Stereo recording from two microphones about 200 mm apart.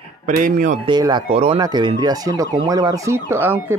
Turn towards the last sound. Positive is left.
turn(degrees=-10)  # may be behind; listen again after turning